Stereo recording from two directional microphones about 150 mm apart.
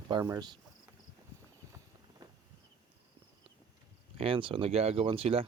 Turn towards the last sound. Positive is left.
turn(degrees=-40)  # may be behind; listen again after turning